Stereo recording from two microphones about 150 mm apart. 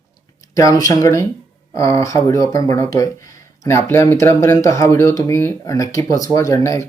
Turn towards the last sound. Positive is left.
turn(degrees=20)  # may be behind; listen again after turning